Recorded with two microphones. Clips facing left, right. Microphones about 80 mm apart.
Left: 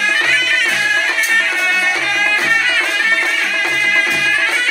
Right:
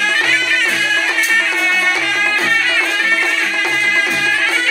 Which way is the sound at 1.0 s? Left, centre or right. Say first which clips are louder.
Even; centre.